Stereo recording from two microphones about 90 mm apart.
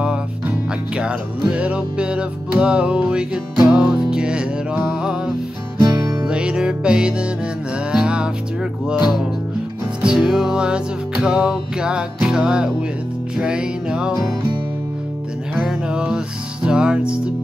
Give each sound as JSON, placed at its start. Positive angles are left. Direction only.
{"t": 0.0, "sound": "music", "side_deg": -10}
{"t": 5.8, "sound": "music", "side_deg": -35}
{"t": 6.2, "sound": "music", "side_deg": -10}
{"t": 10.0, "sound": "music", "side_deg": -5}
{"t": 15.5, "sound": "music", "side_deg": -10}